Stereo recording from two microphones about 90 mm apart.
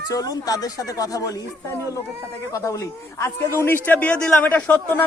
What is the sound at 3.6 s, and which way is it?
A man's voice, 20° left (ahead or behind).